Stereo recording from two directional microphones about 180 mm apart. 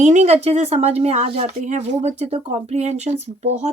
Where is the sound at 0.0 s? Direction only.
40° right (ahead or behind).